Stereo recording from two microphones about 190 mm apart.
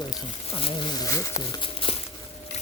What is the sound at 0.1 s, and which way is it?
Speech, 25° left (ahead or behind).